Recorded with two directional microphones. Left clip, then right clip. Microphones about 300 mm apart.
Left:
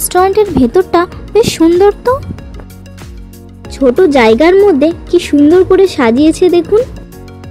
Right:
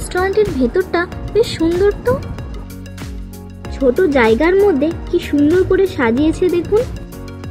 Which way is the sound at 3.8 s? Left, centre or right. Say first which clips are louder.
Left 5 dB; centre.